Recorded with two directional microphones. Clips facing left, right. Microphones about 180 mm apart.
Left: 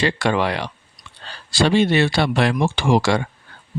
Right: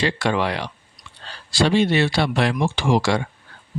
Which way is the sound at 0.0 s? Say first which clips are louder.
Left 2 dB; 55° left (ahead or behind).